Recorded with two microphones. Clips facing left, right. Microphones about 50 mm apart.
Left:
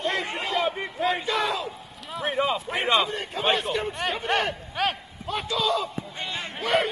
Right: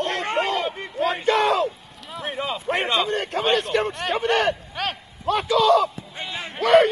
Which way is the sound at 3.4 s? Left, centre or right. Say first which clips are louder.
Right 2 dB; centre.